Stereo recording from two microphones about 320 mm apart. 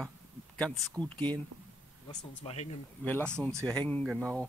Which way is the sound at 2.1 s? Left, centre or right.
Centre.